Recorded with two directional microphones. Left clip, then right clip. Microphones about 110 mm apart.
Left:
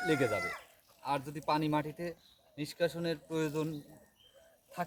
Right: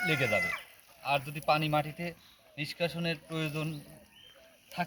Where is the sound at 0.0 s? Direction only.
15° left (ahead or behind).